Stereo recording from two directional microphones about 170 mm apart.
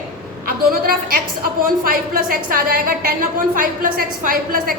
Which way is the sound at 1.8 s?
55° right (ahead or behind).